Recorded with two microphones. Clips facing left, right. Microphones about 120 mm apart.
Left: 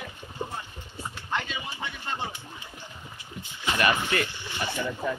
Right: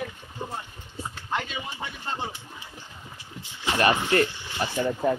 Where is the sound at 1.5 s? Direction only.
35° right (ahead or behind).